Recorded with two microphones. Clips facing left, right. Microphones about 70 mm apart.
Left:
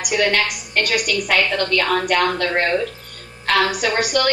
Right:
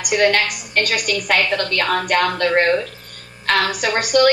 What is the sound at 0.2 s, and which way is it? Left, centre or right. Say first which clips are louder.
A woman's voice: right 3 dB; right.